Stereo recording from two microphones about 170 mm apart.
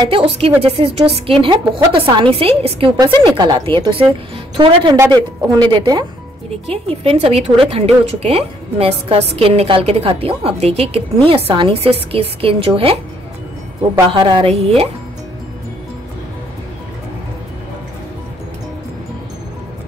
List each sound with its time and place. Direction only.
0.1 s a woman's voice: 35° right (ahead or behind)
14.1 s a woman's voice: 30° right (ahead or behind)